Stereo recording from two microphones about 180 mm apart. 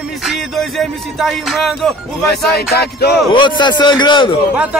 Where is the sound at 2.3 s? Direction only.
60° left (ahead or behind).